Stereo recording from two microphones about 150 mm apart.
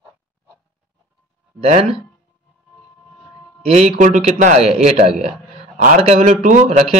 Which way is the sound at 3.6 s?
45° right (ahead or behind).